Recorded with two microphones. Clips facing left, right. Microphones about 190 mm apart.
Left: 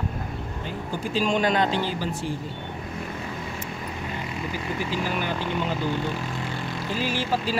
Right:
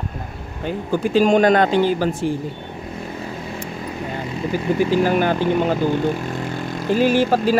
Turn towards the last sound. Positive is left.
turn(degrees=-50)  # may be behind; listen again after turning